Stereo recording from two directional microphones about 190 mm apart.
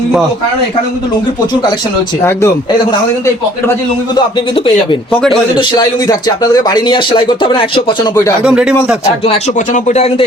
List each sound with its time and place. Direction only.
3.7 s a man's voice: 25° left (ahead or behind)
8.4 s speech: 5° right (ahead or behind)
9.2 s speech: 40° left (ahead or behind)